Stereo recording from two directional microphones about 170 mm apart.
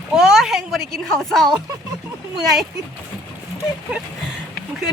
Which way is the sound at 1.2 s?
Centre (ahead or behind).